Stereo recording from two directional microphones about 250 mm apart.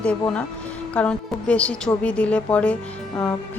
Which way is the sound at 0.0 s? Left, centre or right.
Centre.